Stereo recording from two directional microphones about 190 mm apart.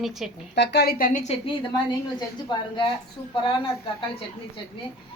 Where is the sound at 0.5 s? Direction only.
60° left (ahead or behind); by 1.5 s 40° left (ahead or behind).